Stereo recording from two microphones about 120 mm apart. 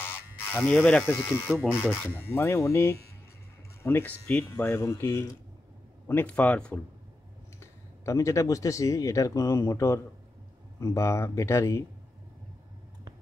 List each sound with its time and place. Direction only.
0.0 s speech: 15° left (ahead or behind)
7.6 s speech: 25° left (ahead or behind)